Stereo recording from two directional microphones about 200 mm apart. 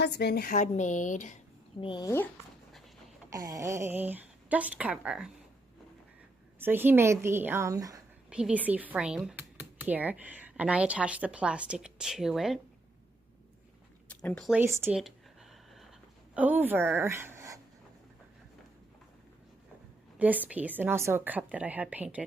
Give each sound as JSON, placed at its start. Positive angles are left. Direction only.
{"t": 0.0, "sound": "a woman's voice", "side_deg": 55}
{"t": 1.8, "sound": "speech", "side_deg": 20}
{"t": 3.3, "sound": "speech", "side_deg": -20}
{"t": 6.6, "sound": "speech", "side_deg": -10}
{"t": 8.3, "sound": "speech", "side_deg": -5}
{"t": 14.3, "sound": "speech", "side_deg": 0}
{"t": 14.6, "sound": "a sound", "side_deg": -10}
{"t": 16.3, "sound": "a woman's voice", "side_deg": -10}
{"t": 20.1, "sound": "speech", "side_deg": -10}